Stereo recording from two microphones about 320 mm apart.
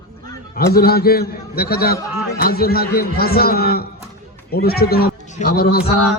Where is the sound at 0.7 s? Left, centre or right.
Left.